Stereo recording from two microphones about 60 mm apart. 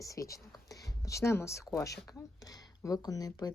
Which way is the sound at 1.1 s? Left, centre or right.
Left.